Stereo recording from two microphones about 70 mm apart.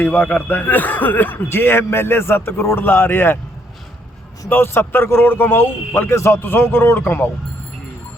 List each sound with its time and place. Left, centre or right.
0.0 s speech: left
4.4 s speech: left